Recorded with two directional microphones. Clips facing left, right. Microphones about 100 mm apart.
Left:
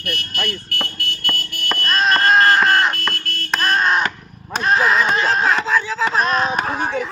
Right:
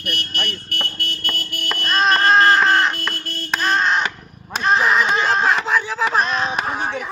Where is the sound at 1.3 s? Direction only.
Centre (ahead or behind).